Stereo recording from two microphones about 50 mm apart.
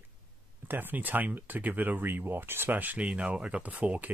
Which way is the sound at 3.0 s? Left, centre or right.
Right.